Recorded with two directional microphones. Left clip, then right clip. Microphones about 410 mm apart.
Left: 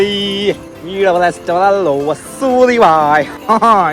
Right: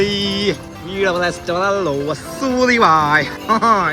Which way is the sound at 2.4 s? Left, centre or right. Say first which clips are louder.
Left 5 dB; centre.